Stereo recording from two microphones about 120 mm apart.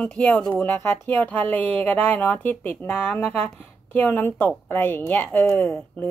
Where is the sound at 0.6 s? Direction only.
20° left (ahead or behind).